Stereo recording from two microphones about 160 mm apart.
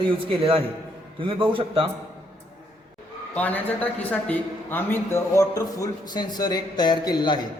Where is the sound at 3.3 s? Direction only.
10° left (ahead or behind).